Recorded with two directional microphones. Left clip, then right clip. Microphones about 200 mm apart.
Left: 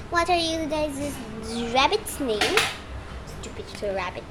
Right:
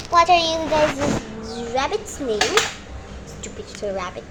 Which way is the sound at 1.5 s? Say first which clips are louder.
Left 2 dB; 30° left (ahead or behind).